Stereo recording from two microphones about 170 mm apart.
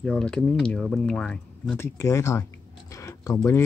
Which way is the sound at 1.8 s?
15° left (ahead or behind).